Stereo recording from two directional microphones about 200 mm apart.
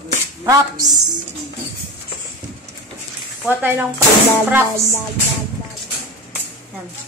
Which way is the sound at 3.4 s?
10° right (ahead or behind).